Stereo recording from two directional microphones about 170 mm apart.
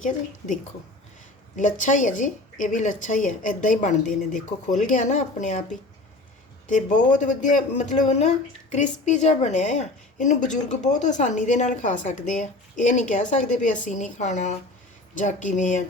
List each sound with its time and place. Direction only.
0.0 s a woman's voice: 45° left (ahead or behind)
6.7 s a woman's voice: 50° left (ahead or behind)